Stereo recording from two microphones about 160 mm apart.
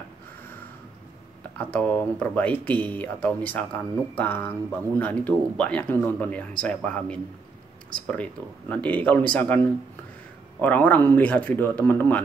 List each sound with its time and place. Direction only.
1.6 s speech: 10° left (ahead or behind)
10.6 s speech: 10° left (ahead or behind)